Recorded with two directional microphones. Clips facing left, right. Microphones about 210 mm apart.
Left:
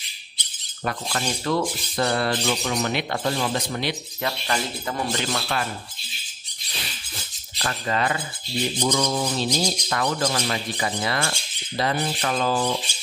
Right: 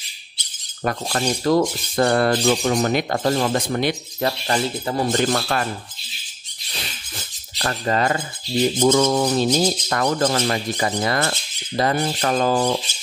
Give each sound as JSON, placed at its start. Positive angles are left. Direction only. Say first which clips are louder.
{"t": 0.8, "sound": "speech", "louder": "right 5 dB", "side_deg": -45}
{"t": 4.5, "sound": "speech", "louder": "right 5 dB", "side_deg": -35}
{"t": 5.1, "sound": "speech", "louder": "right 6 dB", "side_deg": -45}
{"t": 7.5, "sound": "speech", "louder": "right 4 dB", "side_deg": -40}